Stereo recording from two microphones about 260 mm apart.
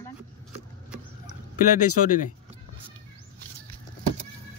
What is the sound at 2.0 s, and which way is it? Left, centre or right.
Speech, left.